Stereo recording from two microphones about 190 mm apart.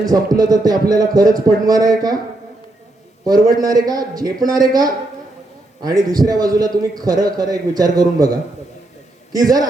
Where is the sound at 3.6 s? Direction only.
20° right (ahead or behind).